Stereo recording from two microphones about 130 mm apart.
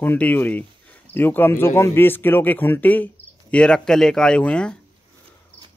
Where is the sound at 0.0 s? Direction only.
15° left (ahead or behind).